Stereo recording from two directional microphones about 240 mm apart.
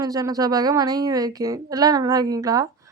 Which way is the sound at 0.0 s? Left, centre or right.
Centre.